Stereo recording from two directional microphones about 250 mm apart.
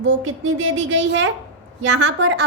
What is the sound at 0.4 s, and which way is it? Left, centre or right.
A woman's voice, right.